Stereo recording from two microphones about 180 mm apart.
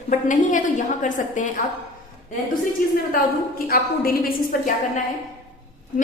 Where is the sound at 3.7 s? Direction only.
55° left (ahead or behind).